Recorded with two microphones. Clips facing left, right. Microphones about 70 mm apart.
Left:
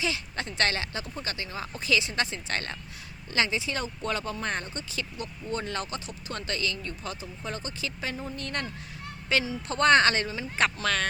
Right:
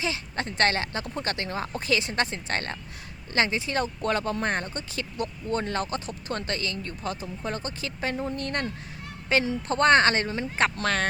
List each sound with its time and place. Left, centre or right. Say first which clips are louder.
0.0 s speech: right 1 dB; right
1.0 s speech: right 5 dB; right